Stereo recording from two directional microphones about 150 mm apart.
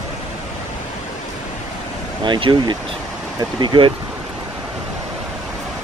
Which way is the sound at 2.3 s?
30° right (ahead or behind).